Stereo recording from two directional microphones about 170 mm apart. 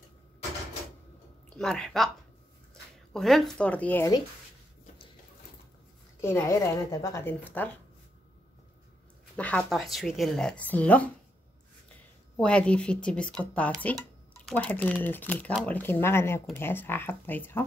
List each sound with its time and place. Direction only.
1.6 s speech: 5° left (ahead or behind)
6.2 s speech: 15° left (ahead or behind)
9.4 s speech: 5° left (ahead or behind)
12.4 s speech: 5° left (ahead or behind)